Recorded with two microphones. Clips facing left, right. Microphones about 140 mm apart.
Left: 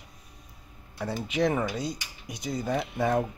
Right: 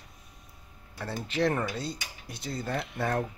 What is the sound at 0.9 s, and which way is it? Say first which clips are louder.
Speech: left 2 dB; 10° left (ahead or behind).